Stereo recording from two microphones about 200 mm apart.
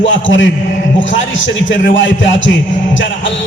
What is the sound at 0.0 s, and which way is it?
Speech, 70° left (ahead or behind).